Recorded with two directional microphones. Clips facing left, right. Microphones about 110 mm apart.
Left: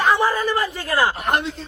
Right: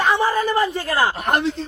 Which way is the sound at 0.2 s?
25° right (ahead or behind).